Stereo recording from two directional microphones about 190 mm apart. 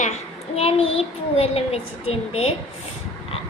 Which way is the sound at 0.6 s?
30° left (ahead or behind).